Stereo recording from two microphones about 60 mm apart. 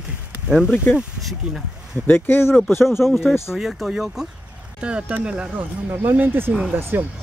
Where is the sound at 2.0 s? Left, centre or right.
Left.